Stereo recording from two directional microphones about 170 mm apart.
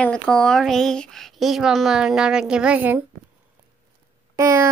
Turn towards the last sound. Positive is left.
turn(degrees=-15)  # may be behind; listen again after turning